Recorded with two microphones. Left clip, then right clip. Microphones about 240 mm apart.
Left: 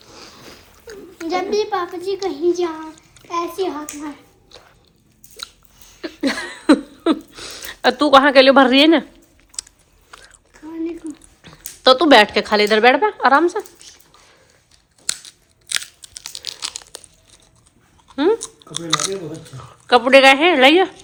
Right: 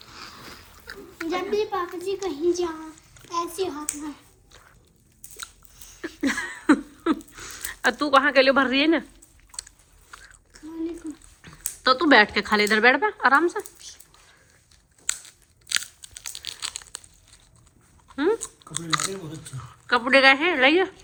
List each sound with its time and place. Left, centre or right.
0.0 s a sound: centre
0.9 s a child's voice: centre
4.5 s squish: centre
6.0 s a sound: centre
7.3 s speech: centre
11.4 s a sound: centre
11.8 s speech: centre
15.0 s crunch: centre
18.1 s chewing: centre
18.7 s speech: centre